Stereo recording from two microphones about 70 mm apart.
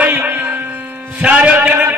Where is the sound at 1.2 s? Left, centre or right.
Centre.